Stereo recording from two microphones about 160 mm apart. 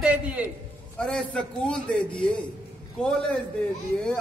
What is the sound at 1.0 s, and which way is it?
A man's voice, 5° left (ahead or behind).